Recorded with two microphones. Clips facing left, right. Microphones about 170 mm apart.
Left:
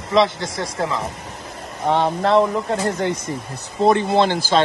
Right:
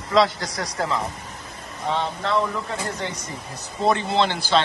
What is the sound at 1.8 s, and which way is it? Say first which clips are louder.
Speech: left 7 dB; 55° left (ahead or behind).